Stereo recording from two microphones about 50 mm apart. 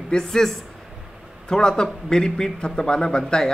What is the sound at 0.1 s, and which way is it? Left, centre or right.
A man's voice, centre.